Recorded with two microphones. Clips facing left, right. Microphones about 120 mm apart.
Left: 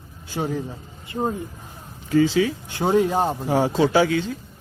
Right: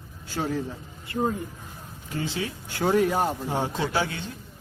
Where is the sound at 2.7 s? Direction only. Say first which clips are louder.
Left 3 dB; 20° left (ahead or behind).